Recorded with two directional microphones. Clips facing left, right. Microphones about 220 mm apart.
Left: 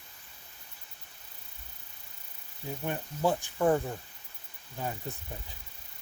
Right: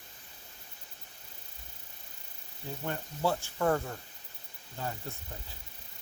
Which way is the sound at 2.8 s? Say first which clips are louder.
Left 2 dB; 15° left (ahead or behind).